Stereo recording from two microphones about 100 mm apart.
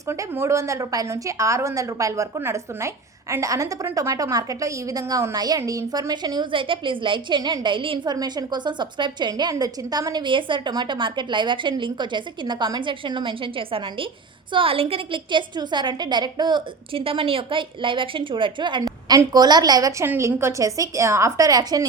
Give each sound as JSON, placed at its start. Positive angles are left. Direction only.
{"t": 0.1, "sound": "a woman's voice", "side_deg": -25}
{"t": 8.1, "sound": "a woman's voice", "side_deg": -40}
{"t": 20.1, "sound": "a woman's voice", "side_deg": -25}